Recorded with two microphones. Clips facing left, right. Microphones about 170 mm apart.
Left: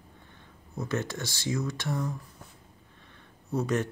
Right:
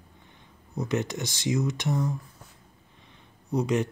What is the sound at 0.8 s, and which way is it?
Speech, 20° right (ahead or behind).